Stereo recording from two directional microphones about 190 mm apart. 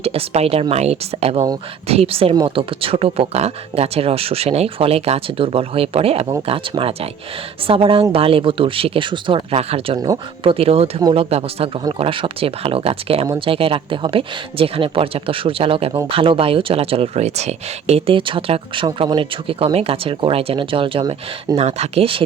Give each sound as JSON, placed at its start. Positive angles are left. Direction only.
{"t": 0.0, "sound": "speech", "side_deg": -30}
{"t": 13.2, "sound": "speech", "side_deg": -20}
{"t": 13.5, "sound": "speech", "side_deg": -30}